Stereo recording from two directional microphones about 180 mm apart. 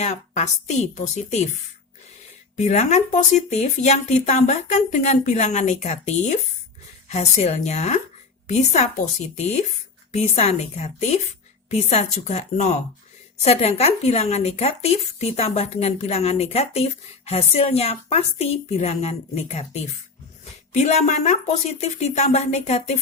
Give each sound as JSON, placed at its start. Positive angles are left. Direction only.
{"t": 0.0, "sound": "speech", "side_deg": 40}
{"t": 2.6, "sound": "speech", "side_deg": 40}